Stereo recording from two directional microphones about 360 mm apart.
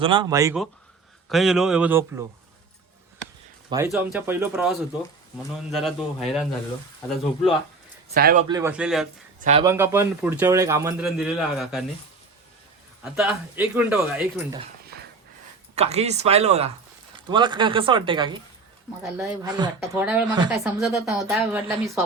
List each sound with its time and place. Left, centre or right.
0.0 s a man's voice: centre
3.7 s speech: centre
8.1 s speech: right
8.4 s speech: centre
9.4 s a man's voice: centre
13.1 s speech: centre
15.7 s a man's voice: centre